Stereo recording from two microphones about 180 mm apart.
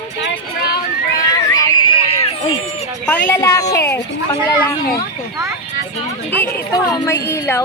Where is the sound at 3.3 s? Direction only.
20° left (ahead or behind).